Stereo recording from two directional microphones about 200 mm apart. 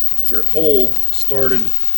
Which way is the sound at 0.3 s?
20° right (ahead or behind).